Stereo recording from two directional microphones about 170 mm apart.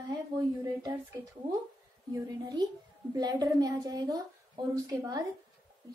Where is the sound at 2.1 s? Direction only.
25° right (ahead or behind).